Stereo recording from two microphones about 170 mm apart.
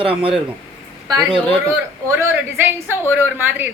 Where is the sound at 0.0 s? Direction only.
30° right (ahead or behind).